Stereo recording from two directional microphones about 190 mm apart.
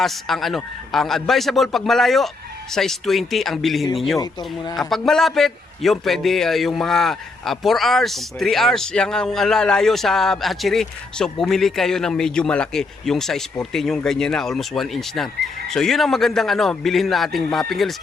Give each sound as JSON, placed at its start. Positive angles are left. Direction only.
{"t": 0.0, "sound": "a man's voice", "side_deg": 0}
{"t": 4.2, "sound": "speech", "side_deg": 20}
{"t": 4.7, "sound": "a man's voice", "side_deg": 0}